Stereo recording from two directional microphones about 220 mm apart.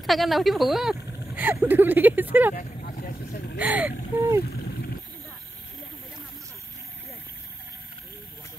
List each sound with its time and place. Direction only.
0.0 s speech: centre (ahead or behind)
2.5 s vehicle: 40° left (ahead or behind)
3.5 s speech: 5° right (ahead or behind)